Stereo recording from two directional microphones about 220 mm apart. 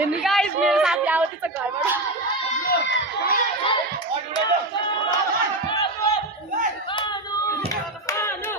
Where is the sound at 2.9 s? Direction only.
55° left (ahead or behind).